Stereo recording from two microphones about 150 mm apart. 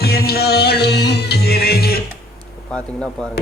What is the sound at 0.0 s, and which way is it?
Music, 90° left.